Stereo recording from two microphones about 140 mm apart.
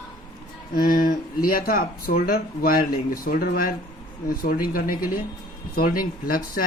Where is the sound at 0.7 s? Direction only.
90° left.